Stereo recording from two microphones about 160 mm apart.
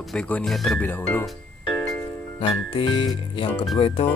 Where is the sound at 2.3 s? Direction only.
35° left (ahead or behind).